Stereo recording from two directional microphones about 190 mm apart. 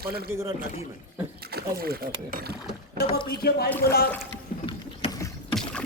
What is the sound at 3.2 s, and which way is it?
Speech, 55° left (ahead or behind).